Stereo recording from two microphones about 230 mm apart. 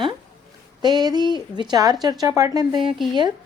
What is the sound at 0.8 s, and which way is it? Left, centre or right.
Speech, centre.